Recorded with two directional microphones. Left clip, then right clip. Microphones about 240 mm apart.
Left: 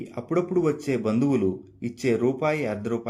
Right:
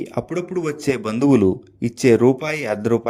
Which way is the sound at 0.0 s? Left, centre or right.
Right.